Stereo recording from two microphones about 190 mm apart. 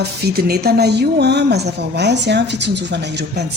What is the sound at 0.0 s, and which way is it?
Speech, 55° right (ahead or behind).